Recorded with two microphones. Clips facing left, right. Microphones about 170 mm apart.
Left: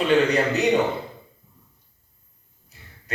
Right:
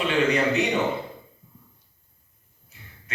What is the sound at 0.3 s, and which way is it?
Speech, 40° left (ahead or behind).